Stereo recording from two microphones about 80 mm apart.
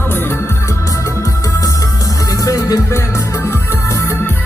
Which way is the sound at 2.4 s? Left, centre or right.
Left.